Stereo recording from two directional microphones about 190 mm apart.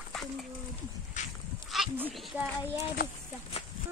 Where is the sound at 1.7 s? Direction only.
5° right (ahead or behind).